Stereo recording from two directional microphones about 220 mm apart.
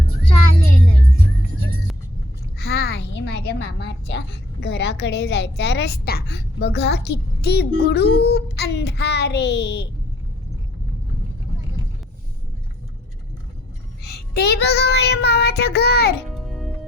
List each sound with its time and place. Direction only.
2.6 s a sound: 45° left (ahead or behind)
4.6 s a woman's voice: 50° left (ahead or behind)
14.0 s a woman's voice: 50° left (ahead or behind)
16.5 s music: centre (ahead or behind)